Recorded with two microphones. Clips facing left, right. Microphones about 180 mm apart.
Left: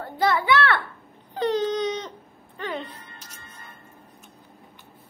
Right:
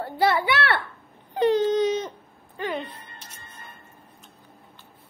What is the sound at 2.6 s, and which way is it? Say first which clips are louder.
Music: right 2 dB; centre (ahead or behind).